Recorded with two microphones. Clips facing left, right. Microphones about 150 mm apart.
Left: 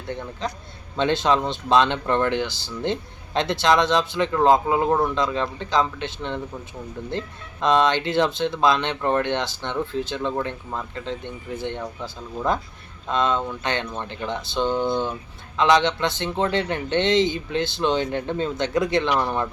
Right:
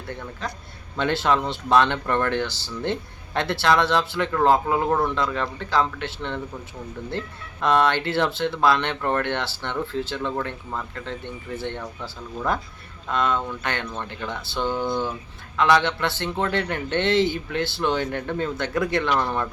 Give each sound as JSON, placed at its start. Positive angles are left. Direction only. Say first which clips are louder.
{"t": 0.1, "sound": "a man's voice", "louder": "left 4 dB", "side_deg": 20}